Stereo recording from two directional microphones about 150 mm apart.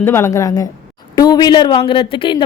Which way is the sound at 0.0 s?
15° left (ahead or behind).